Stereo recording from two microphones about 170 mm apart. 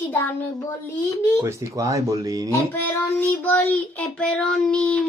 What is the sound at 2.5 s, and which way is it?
Child singing, 10° left (ahead or behind).